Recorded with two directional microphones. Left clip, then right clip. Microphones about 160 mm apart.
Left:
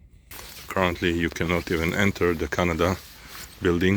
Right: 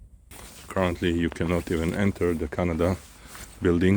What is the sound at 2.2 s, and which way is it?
Speech, 5° right (ahead or behind).